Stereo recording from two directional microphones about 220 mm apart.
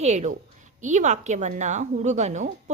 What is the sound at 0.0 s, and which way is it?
Speech, 30° right (ahead or behind).